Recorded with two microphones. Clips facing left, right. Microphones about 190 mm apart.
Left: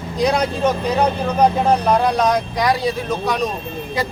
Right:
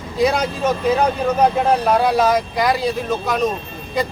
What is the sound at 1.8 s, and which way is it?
A man's voice, 5° right (ahead or behind).